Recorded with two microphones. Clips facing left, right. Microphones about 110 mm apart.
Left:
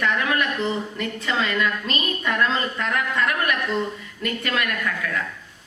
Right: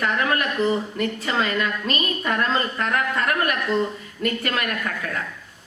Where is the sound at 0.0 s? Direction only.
40° right (ahead or behind).